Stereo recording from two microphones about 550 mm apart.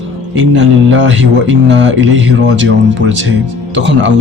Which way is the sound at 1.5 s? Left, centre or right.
Centre.